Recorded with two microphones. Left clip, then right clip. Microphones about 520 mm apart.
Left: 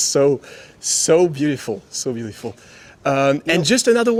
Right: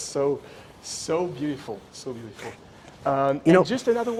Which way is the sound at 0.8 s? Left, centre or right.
Left.